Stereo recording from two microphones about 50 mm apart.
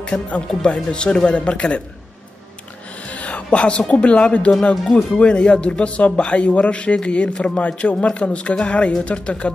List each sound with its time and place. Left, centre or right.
0.0 s speech: left
3.1 s speech: left